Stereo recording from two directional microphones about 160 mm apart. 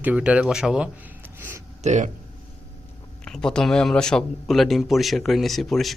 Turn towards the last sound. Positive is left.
turn(degrees=0)  # may be behind; listen again after turning